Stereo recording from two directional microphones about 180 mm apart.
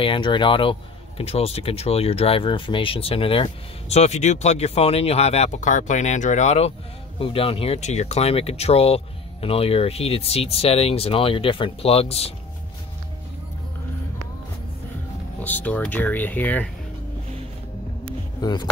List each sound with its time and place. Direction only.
0.0 s speech: 25° left (ahead or behind)
15.4 s speech: 10° left (ahead or behind)
18.4 s speech: 20° left (ahead or behind)